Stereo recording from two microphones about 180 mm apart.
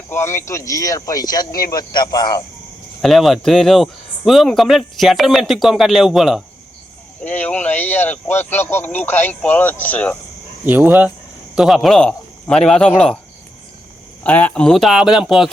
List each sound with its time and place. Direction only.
0.1 s speech: 15° left (ahead or behind)
3.0 s speech: centre (ahead or behind)
7.2 s speech: 10° left (ahead or behind)
10.7 s speech: 10° right (ahead or behind)
14.3 s speech: 10° left (ahead or behind)